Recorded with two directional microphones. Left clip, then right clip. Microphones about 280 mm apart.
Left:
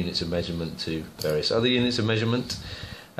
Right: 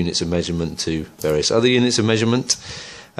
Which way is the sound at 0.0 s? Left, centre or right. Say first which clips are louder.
Right 6 dB; right.